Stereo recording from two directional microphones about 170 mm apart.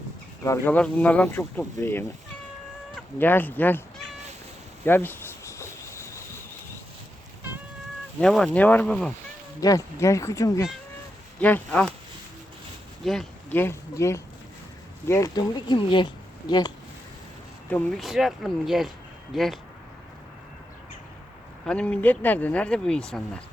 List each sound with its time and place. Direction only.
0.4 s speech: 15° left (ahead or behind)
3.2 s speech: 10° left (ahead or behind)
4.9 s cricket: 10° left (ahead or behind)
8.2 s speech: 5° left (ahead or behind)
9.6 s speech: 20° left (ahead or behind)
11.3 s speech: 10° left (ahead or behind)
13.5 s speech: 15° left (ahead or behind)
17.7 s speech: 5° left (ahead or behind)
21.7 s speech: 5° left (ahead or behind)